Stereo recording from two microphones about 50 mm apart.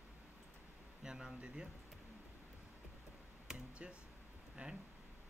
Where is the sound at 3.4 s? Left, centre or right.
Centre.